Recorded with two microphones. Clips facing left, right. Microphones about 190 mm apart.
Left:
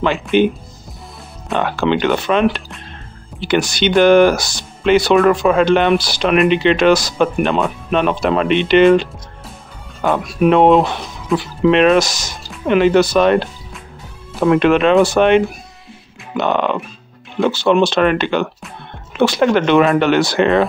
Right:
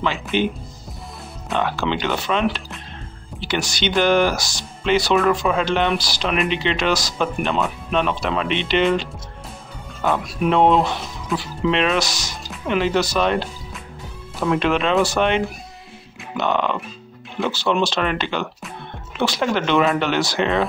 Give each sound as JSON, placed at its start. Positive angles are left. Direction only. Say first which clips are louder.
{"t": 0.0, "sound": "speech", "louder": "left 7 dB", "side_deg": 55}
{"t": 1.5, "sound": "speech", "louder": "left 5 dB", "side_deg": 55}
{"t": 14.4, "sound": "speech", "louder": "left 7 dB", "side_deg": 60}